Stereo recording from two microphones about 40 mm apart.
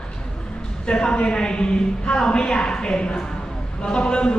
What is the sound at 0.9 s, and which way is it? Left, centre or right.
A woman's voice, left.